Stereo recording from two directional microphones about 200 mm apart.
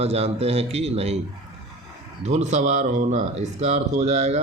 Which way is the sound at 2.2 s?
35° right (ahead or behind).